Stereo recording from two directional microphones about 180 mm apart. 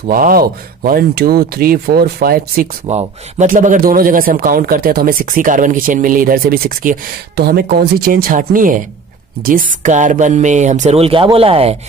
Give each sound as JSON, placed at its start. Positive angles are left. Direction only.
{"t": 0.1, "sound": "a man's voice", "side_deg": -50}
{"t": 2.9, "sound": "a man's voice", "side_deg": -40}